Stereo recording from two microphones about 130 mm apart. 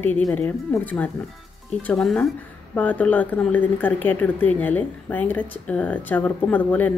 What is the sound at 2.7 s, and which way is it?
Speech, 10° left (ahead or behind).